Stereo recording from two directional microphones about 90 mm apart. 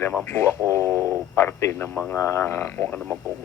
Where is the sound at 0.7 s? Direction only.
30° left (ahead or behind).